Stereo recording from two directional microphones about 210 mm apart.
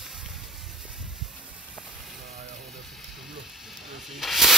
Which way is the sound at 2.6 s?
Centre (ahead or behind).